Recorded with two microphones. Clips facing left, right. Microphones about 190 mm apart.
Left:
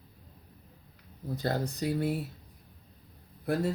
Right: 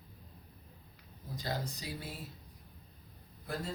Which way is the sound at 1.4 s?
60° left (ahead or behind).